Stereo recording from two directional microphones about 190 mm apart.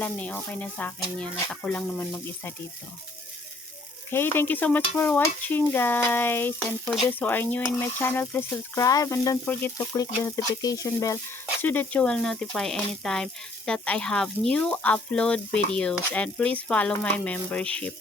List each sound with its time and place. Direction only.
0.0 s speech: 5° left (ahead or behind)
4.1 s speech: 10° left (ahead or behind)
11.6 s frying: 10° left (ahead or behind)